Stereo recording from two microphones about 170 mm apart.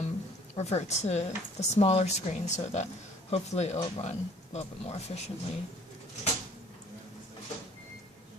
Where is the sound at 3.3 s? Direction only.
40° left (ahead or behind).